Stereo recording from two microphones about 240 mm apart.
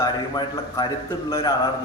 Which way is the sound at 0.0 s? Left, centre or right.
Centre.